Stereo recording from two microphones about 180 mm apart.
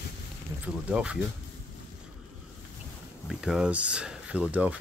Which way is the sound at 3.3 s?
5° right (ahead or behind).